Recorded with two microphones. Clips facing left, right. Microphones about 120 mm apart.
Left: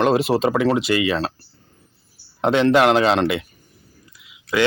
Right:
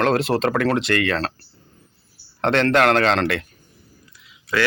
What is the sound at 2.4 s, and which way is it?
Speech, 5° left (ahead or behind).